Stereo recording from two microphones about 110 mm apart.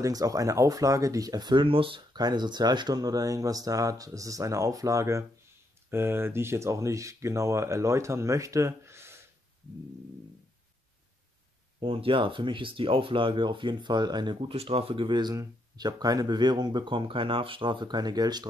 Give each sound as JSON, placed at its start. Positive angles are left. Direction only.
{"t": 0.0, "sound": "speech", "side_deg": -30}
{"t": 2.1, "sound": "speech", "side_deg": -40}
{"t": 11.8, "sound": "speech", "side_deg": -55}
{"t": 14.5, "sound": "speech", "side_deg": -65}